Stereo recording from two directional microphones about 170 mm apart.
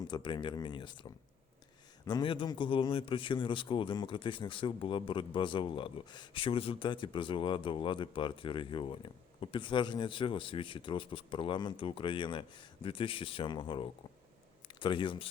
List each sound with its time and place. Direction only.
0.1 s speech: 25° left (ahead or behind)
2.0 s speech: 25° left (ahead or behind)